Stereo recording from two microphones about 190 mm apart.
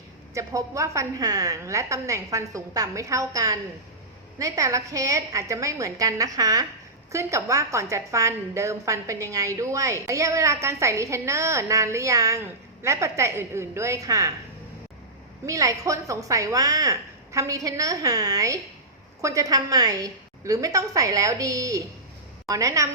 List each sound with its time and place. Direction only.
0.3 s a woman's voice: 15° right (ahead or behind)
15.4 s a woman's voice: 15° right (ahead or behind)